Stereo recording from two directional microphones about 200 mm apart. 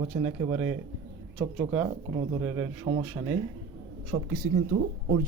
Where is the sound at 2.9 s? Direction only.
35° right (ahead or behind).